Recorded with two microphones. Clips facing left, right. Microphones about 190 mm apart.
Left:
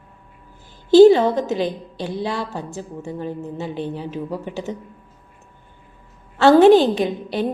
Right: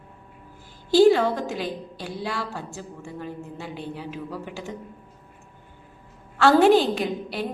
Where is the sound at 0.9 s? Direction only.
20° left (ahead or behind).